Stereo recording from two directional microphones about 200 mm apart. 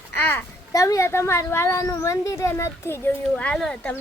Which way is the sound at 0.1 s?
10° left (ahead or behind).